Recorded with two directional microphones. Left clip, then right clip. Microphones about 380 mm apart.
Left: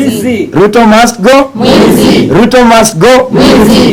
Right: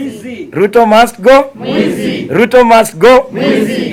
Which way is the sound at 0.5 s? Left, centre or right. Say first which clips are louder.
Left 2 dB; centre.